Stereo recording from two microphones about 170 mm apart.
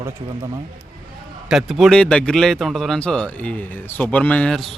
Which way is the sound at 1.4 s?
Centre (ahead or behind).